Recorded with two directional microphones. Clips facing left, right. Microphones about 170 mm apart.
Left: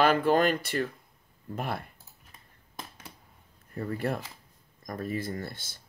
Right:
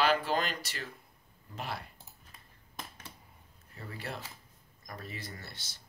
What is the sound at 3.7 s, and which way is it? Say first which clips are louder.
Speech: left 11 dB; 50° left (ahead or behind).